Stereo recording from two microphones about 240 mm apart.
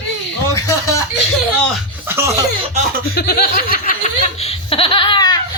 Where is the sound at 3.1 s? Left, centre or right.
Left.